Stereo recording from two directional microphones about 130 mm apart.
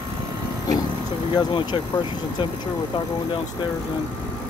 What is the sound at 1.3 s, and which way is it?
Speech, 35° left (ahead or behind).